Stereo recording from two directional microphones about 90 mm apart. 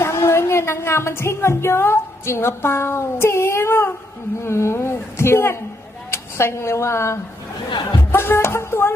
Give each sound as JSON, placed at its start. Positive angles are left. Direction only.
{"t": 0.0, "sound": "a woman's voice", "side_deg": 30}